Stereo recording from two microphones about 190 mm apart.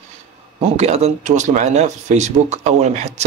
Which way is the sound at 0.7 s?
35° right (ahead or behind).